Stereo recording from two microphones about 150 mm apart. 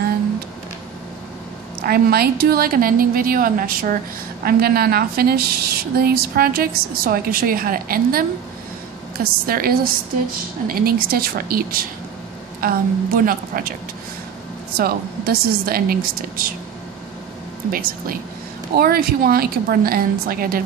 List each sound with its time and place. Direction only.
1.8 s a woman's voice: 90° right; by 4.0 s 70° right (ahead or behind)
4.5 s a woman's voice: 90° right; by 13.7 s 70° right (ahead or behind)
14.8 s a woman's voice: 90° right; by 16.5 s 75° right (ahead or behind)
17.6 s a woman's voice: 70° right (ahead or behind)
18.8 s a woman's voice: 90° right